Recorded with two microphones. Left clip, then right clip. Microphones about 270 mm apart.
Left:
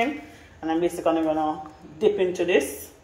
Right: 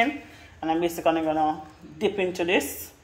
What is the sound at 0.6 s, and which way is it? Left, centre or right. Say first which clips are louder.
Speech: left 1 dB; right.